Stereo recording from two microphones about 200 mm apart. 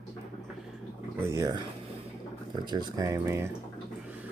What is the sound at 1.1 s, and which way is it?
Speech, 15° right (ahead or behind).